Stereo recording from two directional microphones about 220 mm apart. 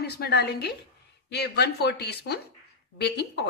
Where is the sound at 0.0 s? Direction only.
45° left (ahead or behind).